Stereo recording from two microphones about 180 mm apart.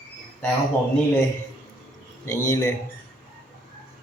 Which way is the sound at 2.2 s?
15° left (ahead or behind).